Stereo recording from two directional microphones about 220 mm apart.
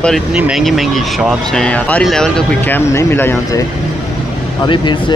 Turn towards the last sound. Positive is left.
turn(degrees=20)  # may be behind; listen again after turning